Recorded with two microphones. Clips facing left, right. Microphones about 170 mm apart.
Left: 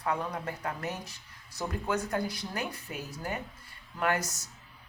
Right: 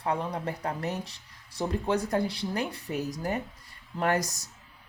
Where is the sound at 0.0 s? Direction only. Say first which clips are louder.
Right 2 dB; 30° right (ahead or behind).